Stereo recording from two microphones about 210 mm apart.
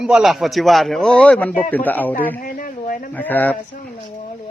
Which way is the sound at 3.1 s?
10° left (ahead or behind).